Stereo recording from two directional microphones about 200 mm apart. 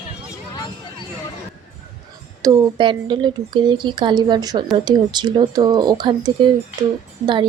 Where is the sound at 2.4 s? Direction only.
20° right (ahead or behind).